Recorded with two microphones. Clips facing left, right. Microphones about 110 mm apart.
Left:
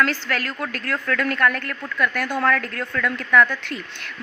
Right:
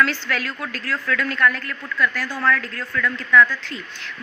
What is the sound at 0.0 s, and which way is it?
A woman's voice, 45° left (ahead or behind).